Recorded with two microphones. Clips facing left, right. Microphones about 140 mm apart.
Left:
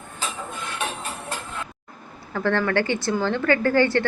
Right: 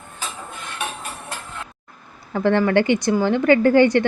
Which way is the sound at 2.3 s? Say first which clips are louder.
Right 5 dB; 20° right (ahead or behind).